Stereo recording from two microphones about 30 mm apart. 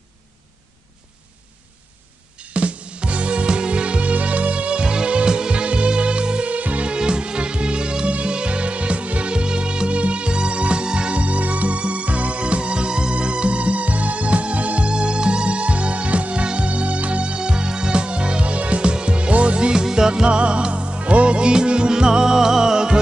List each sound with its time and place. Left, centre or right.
2.4 s music: right
6.5 s music: right
7.0 s music: right
9.3 s music: right
14.9 s music: right
19.7 s music: right
20.2 s music: right
21.4 s music: right